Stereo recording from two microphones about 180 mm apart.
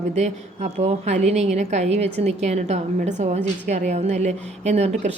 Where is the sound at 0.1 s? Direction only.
40° right (ahead or behind).